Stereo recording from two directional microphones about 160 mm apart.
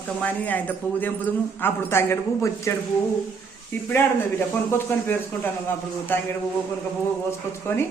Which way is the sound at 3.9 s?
15° left (ahead or behind).